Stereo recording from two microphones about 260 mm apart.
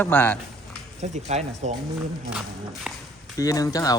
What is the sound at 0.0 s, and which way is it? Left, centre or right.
Speech, centre.